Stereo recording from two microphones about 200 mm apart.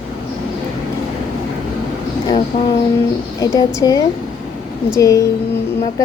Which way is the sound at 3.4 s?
15° left (ahead or behind).